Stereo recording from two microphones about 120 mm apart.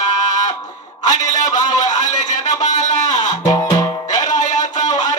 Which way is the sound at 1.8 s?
90° left.